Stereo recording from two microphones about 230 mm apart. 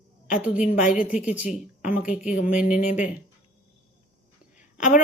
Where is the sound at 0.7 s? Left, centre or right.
Left.